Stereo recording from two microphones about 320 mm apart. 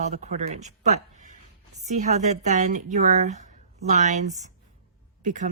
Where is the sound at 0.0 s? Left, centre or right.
Right.